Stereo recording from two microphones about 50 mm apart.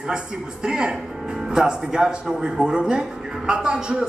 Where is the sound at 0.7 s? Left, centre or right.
Centre.